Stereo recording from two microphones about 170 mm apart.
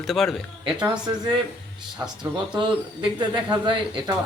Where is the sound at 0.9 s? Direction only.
25° right (ahead or behind).